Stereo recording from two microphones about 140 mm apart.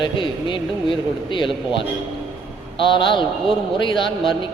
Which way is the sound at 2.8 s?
35° left (ahead or behind).